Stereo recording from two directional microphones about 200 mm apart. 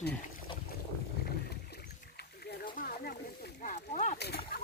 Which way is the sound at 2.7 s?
45° left (ahead or behind).